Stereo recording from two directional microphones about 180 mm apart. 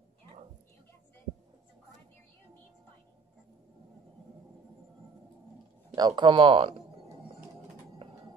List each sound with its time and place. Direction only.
5.9 s speech: 25° right (ahead or behind)